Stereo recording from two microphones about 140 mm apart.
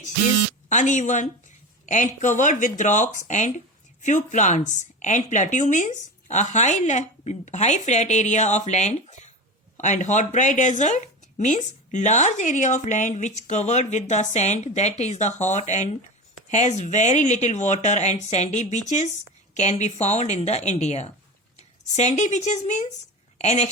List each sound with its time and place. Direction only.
0.7 s a woman's voice: 60° left (ahead or behind)